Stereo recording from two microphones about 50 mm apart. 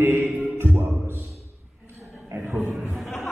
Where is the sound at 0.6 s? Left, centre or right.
Right.